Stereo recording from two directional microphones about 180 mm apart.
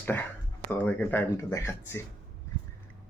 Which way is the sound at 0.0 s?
10° left (ahead or behind).